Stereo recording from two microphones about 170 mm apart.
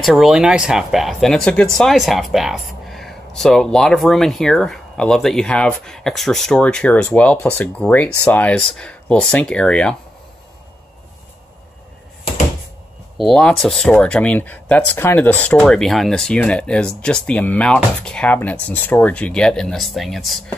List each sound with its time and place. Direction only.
0.0 s speech: centre (ahead or behind)
13.2 s speech: 5° left (ahead or behind)